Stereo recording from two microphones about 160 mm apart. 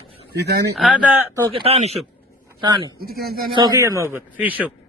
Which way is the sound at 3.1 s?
70° right (ahead or behind).